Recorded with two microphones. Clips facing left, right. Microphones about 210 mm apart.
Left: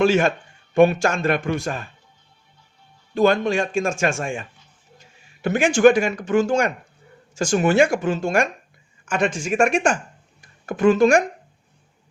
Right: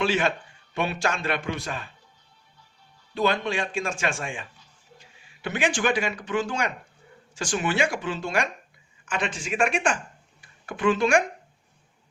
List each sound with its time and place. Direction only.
0.0 s a man's voice: 45° left (ahead or behind)
3.2 s a man's voice: 45° left (ahead or behind)